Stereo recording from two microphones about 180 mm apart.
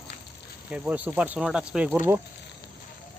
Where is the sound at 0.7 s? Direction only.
10° right (ahead or behind).